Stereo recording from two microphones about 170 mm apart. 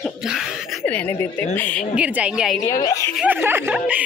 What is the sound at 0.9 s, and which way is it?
Speech, 10° left (ahead or behind).